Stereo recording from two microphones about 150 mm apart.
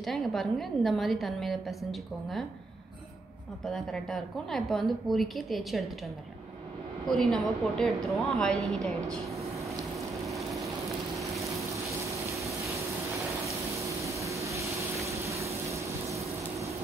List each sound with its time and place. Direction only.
0.0 s a woman's voice: centre (ahead or behind)
3.6 s a woman's voice: centre (ahead or behind)
7.1 s a woman's voice: centre (ahead or behind)
12.4 s a sound: 20° right (ahead or behind)
13.7 s vehicle: 20° right (ahead or behind)